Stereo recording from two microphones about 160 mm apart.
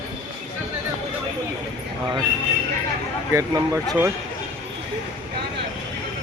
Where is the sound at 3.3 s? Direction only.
15° right (ahead or behind).